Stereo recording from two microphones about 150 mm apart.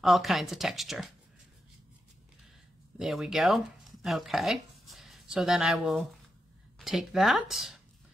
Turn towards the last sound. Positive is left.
turn(degrees=0)  # may be behind; listen again after turning